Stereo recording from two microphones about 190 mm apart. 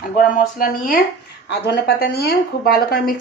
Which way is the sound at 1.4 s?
60° left (ahead or behind).